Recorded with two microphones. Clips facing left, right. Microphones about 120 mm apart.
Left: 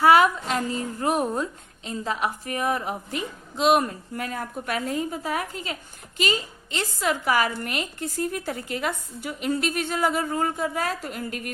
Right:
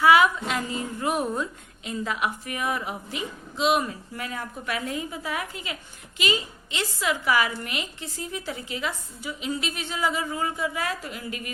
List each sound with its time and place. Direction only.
0.0 s a woman's voice: 40° left (ahead or behind)